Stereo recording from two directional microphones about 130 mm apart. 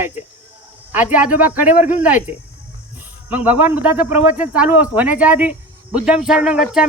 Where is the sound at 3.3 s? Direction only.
10° right (ahead or behind).